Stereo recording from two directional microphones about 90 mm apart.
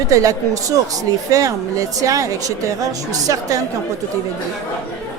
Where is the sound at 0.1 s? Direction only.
40° right (ahead or behind).